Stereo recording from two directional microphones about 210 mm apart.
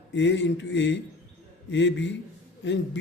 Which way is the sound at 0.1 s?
60° left (ahead or behind).